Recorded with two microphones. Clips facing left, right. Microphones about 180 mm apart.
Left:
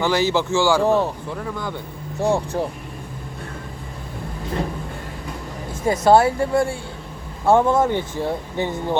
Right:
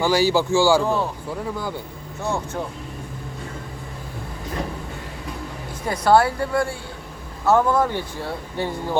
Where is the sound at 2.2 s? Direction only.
35° left (ahead or behind).